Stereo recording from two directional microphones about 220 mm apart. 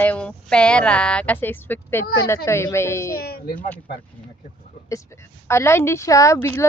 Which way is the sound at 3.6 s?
5° left (ahead or behind).